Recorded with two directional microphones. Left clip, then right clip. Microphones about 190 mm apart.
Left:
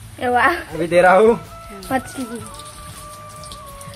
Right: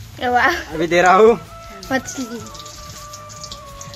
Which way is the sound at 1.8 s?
5° right (ahead or behind).